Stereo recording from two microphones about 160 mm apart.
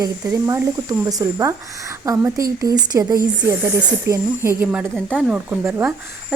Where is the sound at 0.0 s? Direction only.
20° right (ahead or behind).